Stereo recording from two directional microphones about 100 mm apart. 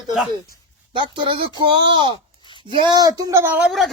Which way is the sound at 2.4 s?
50° left (ahead or behind).